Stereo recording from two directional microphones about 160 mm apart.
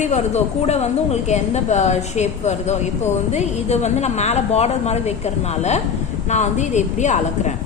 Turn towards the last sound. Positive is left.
turn(degrees=45)  # may be behind; listen again after turning